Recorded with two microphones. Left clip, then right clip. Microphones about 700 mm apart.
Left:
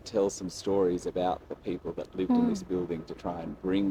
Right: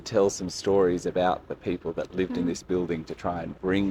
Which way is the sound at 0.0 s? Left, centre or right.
Right.